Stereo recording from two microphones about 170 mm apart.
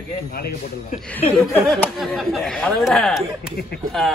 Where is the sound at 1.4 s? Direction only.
5° left (ahead or behind).